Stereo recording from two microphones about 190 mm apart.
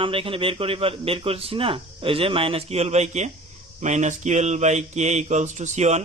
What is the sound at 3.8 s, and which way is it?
Mantra, 40° right (ahead or behind).